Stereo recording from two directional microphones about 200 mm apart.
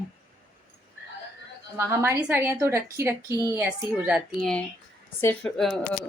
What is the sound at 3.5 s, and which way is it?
Speech, 5° right (ahead or behind).